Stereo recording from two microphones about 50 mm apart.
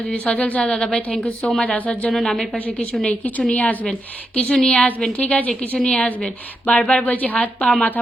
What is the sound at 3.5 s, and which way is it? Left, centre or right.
Speech, left.